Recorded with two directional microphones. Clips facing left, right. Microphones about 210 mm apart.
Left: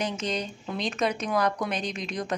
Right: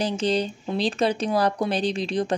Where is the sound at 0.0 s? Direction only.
30° right (ahead or behind).